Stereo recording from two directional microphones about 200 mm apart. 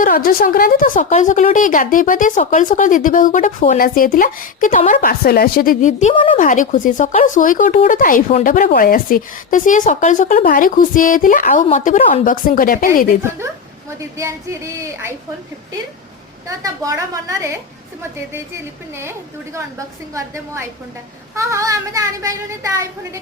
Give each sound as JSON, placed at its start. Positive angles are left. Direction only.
{"t": 0.0, "sound": "a woman's voice", "side_deg": 45}
{"t": 14.2, "sound": "speech", "side_deg": -15}
{"t": 16.5, "sound": "speech", "side_deg": -15}
{"t": 20.1, "sound": "speech", "side_deg": -15}